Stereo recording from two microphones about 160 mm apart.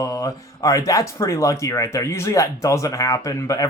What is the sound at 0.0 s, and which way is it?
Speech, 20° left (ahead or behind).